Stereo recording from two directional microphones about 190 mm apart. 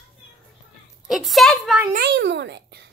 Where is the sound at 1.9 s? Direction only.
60° right (ahead or behind).